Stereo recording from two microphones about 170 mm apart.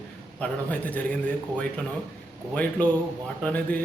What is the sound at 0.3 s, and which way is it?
A man's voice, 5° left (ahead or behind).